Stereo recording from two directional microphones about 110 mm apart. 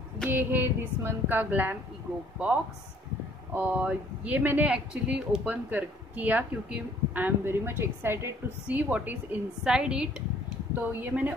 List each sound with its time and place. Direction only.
0.3 s speech: 20° right (ahead or behind)